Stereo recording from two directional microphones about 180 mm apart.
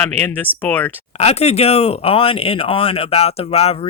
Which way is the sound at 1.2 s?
35° left (ahead or behind).